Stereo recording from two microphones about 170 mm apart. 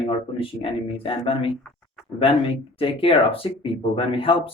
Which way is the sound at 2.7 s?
30° left (ahead or behind).